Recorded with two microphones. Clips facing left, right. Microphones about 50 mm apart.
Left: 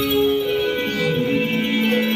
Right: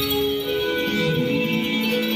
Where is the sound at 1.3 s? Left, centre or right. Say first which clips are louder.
Left 2 dB; left.